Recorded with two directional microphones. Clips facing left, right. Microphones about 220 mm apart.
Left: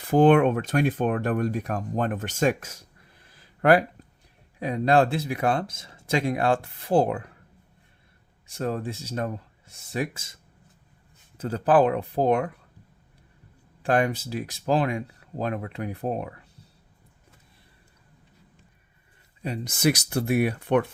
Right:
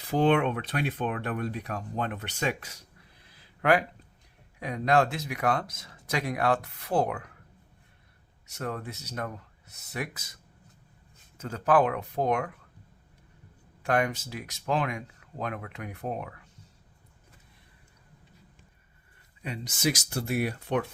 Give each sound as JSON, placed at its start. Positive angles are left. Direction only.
{"t": 0.1, "sound": "speech", "side_deg": 50}
{"t": 3.2, "sound": "a sound", "side_deg": 40}
{"t": 4.6, "sound": "speech", "side_deg": 30}
{"t": 8.4, "sound": "speech", "side_deg": 30}
{"t": 13.8, "sound": "speech", "side_deg": 30}
{"t": 19.7, "sound": "speech", "side_deg": 60}